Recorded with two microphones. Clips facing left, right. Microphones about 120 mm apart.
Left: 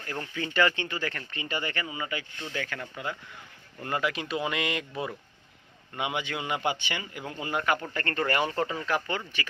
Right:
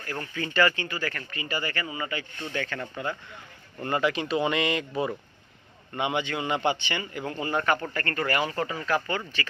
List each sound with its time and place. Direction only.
0.0 s a man's voice: 15° left (ahead or behind)
7.9 s speech: 25° left (ahead or behind)